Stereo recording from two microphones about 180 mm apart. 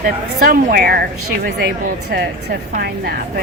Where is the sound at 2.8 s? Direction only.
60° right (ahead or behind).